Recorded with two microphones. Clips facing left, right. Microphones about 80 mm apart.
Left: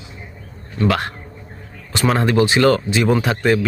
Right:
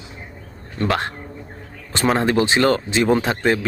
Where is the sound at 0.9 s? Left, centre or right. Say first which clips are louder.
Left 2 dB; right.